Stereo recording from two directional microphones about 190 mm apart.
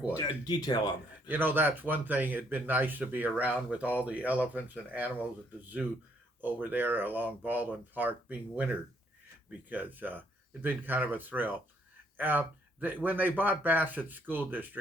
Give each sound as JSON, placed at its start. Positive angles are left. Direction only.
{"t": 0.2, "sound": "speech", "side_deg": 20}
{"t": 1.3, "sound": "speech", "side_deg": -10}
{"t": 6.4, "sound": "speech", "side_deg": -10}